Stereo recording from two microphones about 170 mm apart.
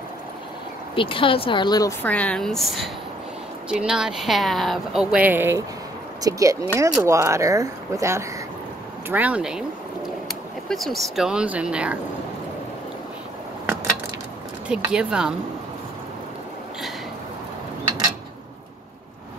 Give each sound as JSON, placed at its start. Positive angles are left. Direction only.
{"t": 0.9, "sound": "speech", "side_deg": 30}
{"t": 2.0, "sound": "speech", "side_deg": 10}
{"t": 10.7, "sound": "speech", "side_deg": 0}
{"t": 14.7, "sound": "speech", "side_deg": -5}